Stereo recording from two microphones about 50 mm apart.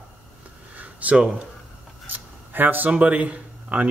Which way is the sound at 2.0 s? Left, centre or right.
Right.